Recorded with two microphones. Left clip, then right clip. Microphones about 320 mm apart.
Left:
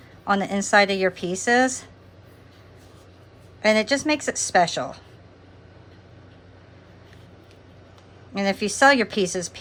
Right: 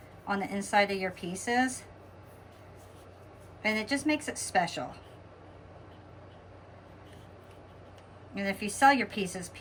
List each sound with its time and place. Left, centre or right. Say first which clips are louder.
0.3 s a woman's voice: left 11 dB; centre
3.6 s a woman's voice: left 11 dB; centre
8.4 s a woman's voice: left 7 dB; centre